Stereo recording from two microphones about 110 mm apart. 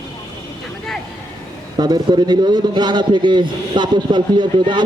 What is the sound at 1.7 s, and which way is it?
A man's voice, 40° right (ahead or behind).